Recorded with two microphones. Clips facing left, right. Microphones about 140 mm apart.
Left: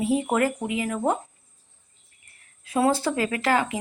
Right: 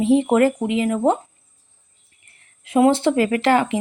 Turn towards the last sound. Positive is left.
turn(degrees=-25)  # may be behind; listen again after turning